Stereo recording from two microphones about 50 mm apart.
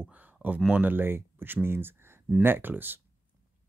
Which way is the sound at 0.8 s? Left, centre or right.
Right.